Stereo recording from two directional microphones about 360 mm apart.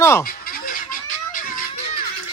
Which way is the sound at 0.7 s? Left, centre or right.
Left.